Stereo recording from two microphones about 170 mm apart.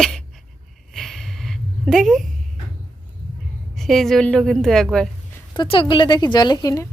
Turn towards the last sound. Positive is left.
turn(degrees=20)  # may be behind; listen again after turning